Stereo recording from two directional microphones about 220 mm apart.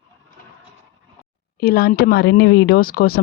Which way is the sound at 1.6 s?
45° left (ahead or behind).